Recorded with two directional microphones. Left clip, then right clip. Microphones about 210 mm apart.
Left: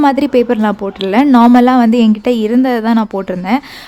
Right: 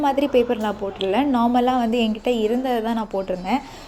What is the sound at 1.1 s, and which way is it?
A woman's voice, 35° left (ahead or behind).